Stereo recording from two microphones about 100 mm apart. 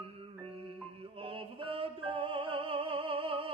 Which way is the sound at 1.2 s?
65° right (ahead or behind).